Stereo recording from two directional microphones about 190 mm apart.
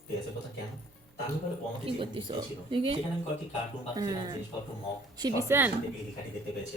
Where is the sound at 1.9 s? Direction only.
25° right (ahead or behind); by 5.7 s 10° right (ahead or behind).